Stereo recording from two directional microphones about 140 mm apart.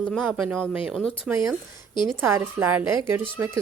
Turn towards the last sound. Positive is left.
turn(degrees=-15)  # may be behind; listen again after turning